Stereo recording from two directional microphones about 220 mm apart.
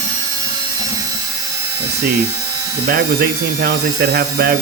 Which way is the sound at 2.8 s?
45° right (ahead or behind).